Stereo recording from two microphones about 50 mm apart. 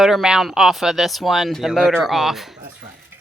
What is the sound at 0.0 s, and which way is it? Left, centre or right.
Speech, centre.